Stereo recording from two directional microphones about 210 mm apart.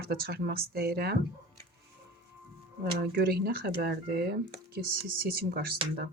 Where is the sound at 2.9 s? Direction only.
50° right (ahead or behind).